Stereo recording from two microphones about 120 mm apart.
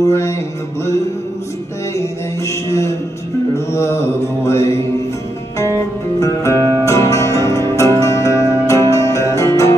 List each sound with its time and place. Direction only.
0.0 s mantra: 25° left (ahead or behind)
2.0 s mantra: 25° left (ahead or behind)
6.1 s music: 25° left (ahead or behind)
6.5 s music: 30° right (ahead or behind)
6.8 s music: 25° left (ahead or behind)